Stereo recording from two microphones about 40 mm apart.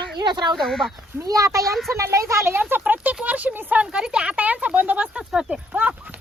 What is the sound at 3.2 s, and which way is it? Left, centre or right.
Speech, right.